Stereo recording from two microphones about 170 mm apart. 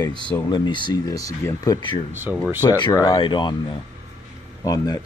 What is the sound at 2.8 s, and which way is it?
Speech, 25° left (ahead or behind).